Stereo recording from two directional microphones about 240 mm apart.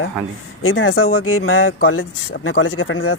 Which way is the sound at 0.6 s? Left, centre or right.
Left.